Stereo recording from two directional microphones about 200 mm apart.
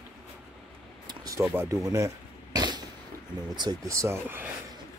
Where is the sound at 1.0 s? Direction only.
20° right (ahead or behind).